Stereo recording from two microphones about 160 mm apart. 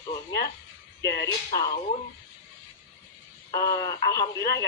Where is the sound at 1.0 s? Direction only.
90° left.